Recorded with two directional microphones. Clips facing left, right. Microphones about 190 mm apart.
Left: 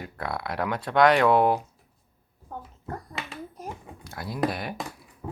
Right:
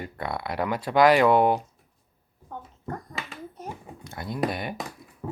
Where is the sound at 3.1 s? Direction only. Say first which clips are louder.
Left 1 dB; centre (ahead or behind).